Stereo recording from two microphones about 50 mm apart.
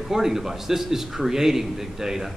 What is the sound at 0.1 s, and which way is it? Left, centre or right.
A man's voice, centre.